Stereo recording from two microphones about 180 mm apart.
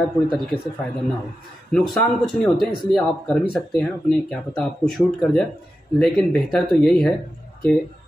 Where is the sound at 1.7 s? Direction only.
Centre (ahead or behind).